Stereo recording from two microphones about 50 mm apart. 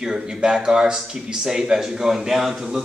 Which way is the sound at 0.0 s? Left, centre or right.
Centre.